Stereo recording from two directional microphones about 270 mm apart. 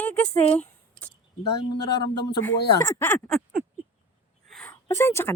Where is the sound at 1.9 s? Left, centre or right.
Left.